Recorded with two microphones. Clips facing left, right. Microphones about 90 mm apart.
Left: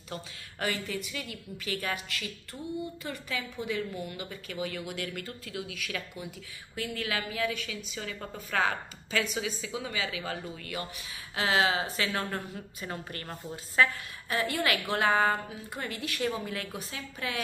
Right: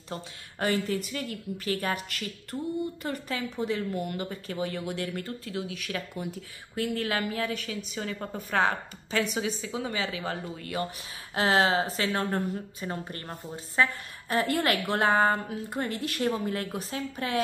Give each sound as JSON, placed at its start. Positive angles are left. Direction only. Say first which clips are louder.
{"t": 0.1, "sound": "a woman's voice", "louder": "right 2 dB", "side_deg": -35}
{"t": 3.9, "sound": "speech", "louder": "right 6 dB", "side_deg": -55}
{"t": 4.2, "sound": "a woman's voice", "louder": "right 4 dB", "side_deg": -35}
{"t": 11.3, "sound": "a woman's voice", "louder": "right 3 dB", "side_deg": -40}
{"t": 14.3, "sound": "a woman's voice", "louder": "right 3 dB", "side_deg": -40}